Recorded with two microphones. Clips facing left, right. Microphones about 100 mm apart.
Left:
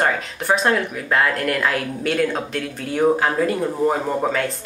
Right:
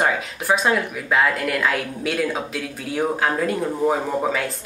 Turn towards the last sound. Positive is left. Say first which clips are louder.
# left 1 dB
turn(degrees=0)  # may be behind; listen again after turning